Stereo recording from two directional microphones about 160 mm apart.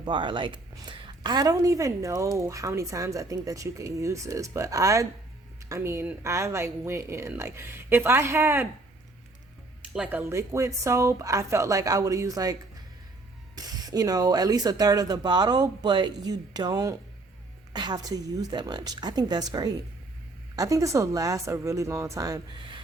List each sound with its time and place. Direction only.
0.0 s a woman's voice: 30° right (ahead or behind)
9.9 s a woman's voice: 10° right (ahead or behind)
13.9 s a woman's voice: 25° right (ahead or behind)